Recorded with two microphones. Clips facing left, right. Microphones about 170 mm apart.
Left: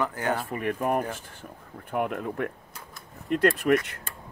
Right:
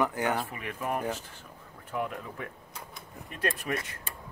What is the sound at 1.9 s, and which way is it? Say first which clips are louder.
Speech: left 6 dB; 60° left (ahead or behind).